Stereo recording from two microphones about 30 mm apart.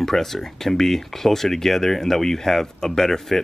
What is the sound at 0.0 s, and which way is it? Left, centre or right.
Speech, centre.